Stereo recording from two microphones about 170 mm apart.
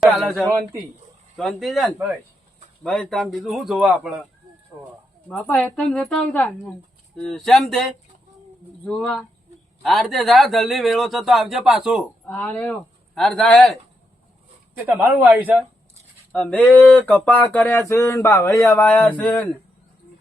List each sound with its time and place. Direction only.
0.0 s speech: centre (ahead or behind)
0.5 s speech: 20° right (ahead or behind)
1.4 s a man's voice: centre (ahead or behind)
5.3 s a sound: 10° left (ahead or behind)
7.2 s a man's voice: centre (ahead or behind)
8.8 s a man's voice: 5° left (ahead or behind)
12.2 s speech: 10° left (ahead or behind)
14.8 s a man's voice: 10° right (ahead or behind)
16.3 s a sound: 10° left (ahead or behind)